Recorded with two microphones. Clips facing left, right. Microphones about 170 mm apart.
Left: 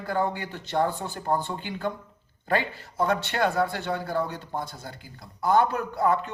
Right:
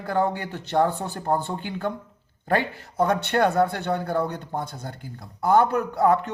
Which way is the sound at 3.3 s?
60° right (ahead or behind).